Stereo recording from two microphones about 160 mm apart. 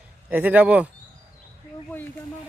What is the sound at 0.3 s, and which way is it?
Speech, 10° right (ahead or behind).